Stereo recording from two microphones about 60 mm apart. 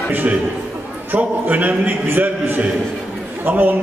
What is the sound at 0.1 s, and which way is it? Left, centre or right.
A man's voice, right.